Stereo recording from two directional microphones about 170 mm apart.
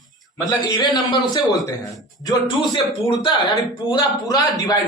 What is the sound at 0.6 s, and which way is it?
Speech, 25° left (ahead or behind).